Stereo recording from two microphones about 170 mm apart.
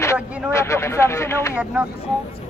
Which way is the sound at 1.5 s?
10° right (ahead or behind).